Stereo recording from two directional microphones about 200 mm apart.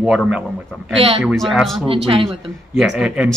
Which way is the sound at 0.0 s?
5° right (ahead or behind).